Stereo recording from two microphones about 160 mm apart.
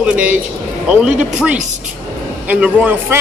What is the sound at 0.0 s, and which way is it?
Speech, 10° right (ahead or behind).